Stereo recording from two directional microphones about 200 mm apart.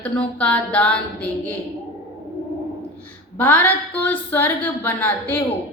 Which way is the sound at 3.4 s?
10° left (ahead or behind).